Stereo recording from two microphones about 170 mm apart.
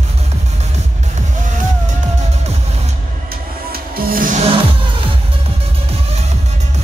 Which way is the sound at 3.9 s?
60° right (ahead or behind).